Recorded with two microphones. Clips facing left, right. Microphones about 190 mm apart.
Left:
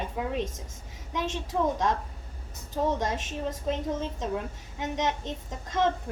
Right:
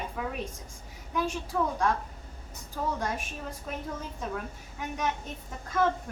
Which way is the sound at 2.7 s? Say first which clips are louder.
Left 4 dB; 20° left (ahead or behind).